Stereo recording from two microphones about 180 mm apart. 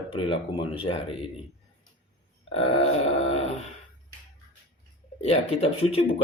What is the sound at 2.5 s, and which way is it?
Speech, 35° left (ahead or behind).